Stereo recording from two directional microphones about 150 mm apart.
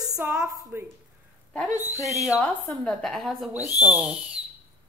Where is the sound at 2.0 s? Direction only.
20° left (ahead or behind).